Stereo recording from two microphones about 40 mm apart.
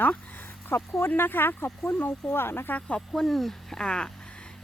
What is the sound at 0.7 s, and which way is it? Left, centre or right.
Speech, left.